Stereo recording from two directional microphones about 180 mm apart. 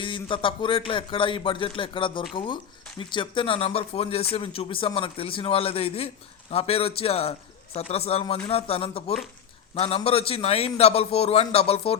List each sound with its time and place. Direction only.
0.0 s a man's voice: 30° left (ahead or behind)